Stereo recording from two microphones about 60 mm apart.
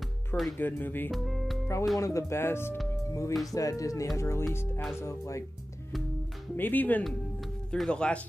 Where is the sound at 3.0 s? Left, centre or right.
Left.